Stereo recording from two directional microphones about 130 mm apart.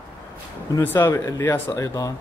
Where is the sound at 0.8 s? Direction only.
15° left (ahead or behind).